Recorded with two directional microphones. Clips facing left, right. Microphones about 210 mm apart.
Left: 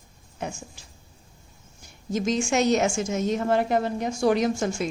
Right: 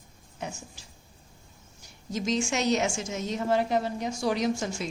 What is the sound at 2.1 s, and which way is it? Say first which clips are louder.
A woman's voice: left 4 dB; 50° left (ahead or behind).